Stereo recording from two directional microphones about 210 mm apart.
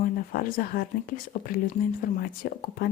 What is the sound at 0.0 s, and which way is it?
Speech, 40° left (ahead or behind).